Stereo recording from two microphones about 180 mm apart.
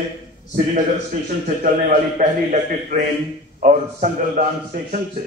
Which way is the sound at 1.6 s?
45° right (ahead or behind).